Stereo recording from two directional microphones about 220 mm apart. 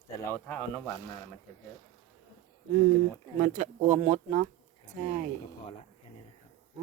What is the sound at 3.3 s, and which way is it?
Speech, 35° right (ahead or behind).